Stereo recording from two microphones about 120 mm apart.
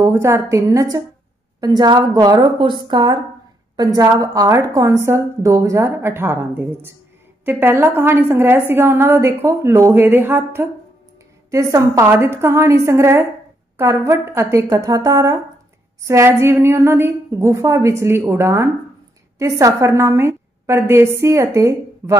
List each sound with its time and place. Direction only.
0.0 s a woman's voice: 25° right (ahead or behind)